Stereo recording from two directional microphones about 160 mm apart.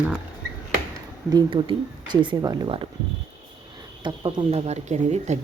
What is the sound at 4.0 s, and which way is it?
Speech, 30° right (ahead or behind).